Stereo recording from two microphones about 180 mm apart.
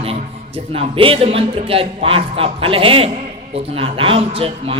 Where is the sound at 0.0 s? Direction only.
35° right (ahead or behind).